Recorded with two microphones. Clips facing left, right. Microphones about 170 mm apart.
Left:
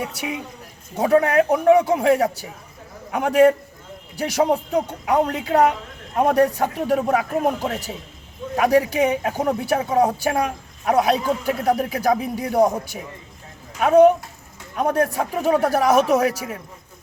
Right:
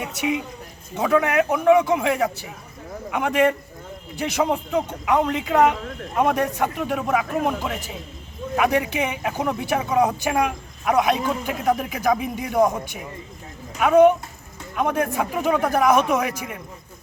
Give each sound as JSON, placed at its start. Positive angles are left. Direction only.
{"t": 0.9, "sound": "speech", "side_deg": 35}